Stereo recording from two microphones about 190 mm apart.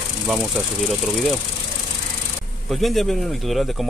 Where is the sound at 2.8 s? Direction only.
Centre (ahead or behind).